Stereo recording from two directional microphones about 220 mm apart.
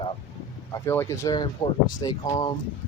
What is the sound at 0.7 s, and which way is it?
Speech, 10° left (ahead or behind).